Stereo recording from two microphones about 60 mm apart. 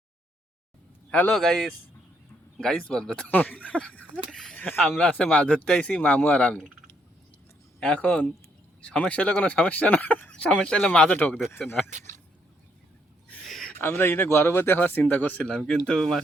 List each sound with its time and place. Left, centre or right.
1.3 s a man's voice: centre
2.6 s speech: centre
3.2 s speech: left
4.3 s speech: centre
4.9 s speech: left
6.0 s speech: left
7.9 s speech: left
11.1 s speech: left
11.6 s speech: centre
13.4 s a sound: centre
13.8 s speech: left
14.8 s speech: left
15.4 s a man's voice: centre